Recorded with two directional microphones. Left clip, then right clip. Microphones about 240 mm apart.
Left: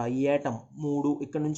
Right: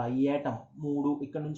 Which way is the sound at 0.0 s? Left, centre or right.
Left.